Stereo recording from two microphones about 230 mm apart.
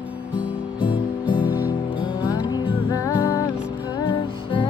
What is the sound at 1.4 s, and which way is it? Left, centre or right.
Music, centre.